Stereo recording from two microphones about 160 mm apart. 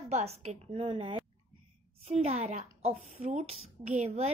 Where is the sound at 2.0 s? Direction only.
45° right (ahead or behind).